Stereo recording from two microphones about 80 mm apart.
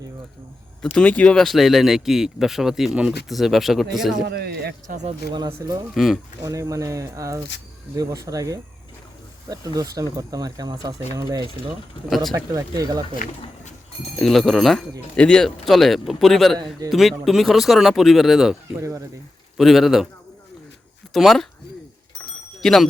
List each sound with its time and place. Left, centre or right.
1.0 s speech: centre
1.4 s speech: centre
5.9 s speech: centre
6.4 s speech: right
12.0 s speech: centre
12.3 s speech: right
14.2 s speech: centre
15.1 s speech: centre
18.8 s speech: right
19.5 s speech: centre
21.1 s speech: centre
22.6 s speech: centre